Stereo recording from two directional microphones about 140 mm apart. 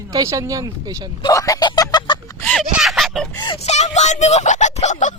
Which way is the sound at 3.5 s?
50° left (ahead or behind).